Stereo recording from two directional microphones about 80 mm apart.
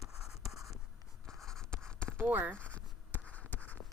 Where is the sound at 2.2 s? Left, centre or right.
Right.